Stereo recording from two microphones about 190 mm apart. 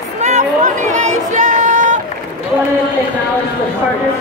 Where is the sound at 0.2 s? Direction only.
40° right (ahead or behind).